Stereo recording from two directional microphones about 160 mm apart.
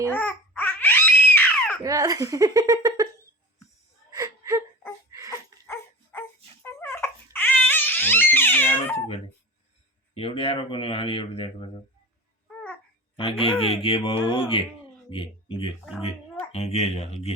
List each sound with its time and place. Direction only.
0.1 s babbling: 10° left (ahead or behind)
1.8 s speech: 20° right (ahead or behind)
4.1 s whimper: 20° right (ahead or behind)
5.6 s dog: 15° left (ahead or behind)
10.2 s speech: 35° left (ahead or behind)
13.1 s speech: 35° left (ahead or behind)